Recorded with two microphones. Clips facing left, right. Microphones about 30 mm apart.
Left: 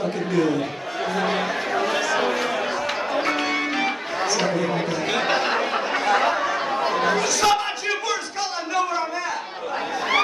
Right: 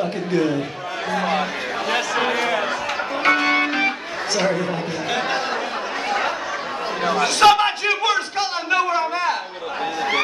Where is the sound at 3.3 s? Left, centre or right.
Right.